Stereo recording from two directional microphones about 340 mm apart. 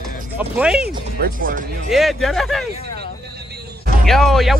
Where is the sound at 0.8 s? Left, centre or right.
Right.